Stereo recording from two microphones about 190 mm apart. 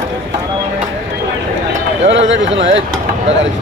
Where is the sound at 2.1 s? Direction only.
75° right (ahead or behind).